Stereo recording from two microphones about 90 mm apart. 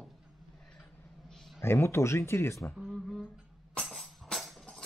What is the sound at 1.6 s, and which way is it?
Speech, 25° left (ahead or behind).